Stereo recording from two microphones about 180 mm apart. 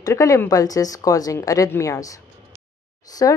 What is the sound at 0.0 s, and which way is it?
Speech, 15° left (ahead or behind).